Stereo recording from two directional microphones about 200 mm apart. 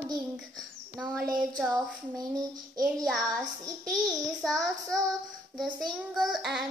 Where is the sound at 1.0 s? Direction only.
5° right (ahead or behind).